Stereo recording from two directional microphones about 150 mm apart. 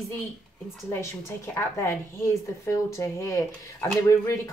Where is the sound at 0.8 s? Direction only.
20° left (ahead or behind).